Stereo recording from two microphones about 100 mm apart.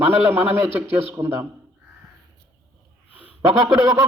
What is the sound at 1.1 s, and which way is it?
Speech, 30° right (ahead or behind).